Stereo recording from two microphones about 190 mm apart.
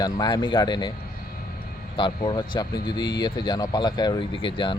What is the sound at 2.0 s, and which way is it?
Speech, 25° left (ahead or behind).